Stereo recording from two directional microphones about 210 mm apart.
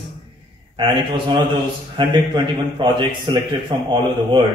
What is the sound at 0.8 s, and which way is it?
A man's voice, 25° right (ahead or behind).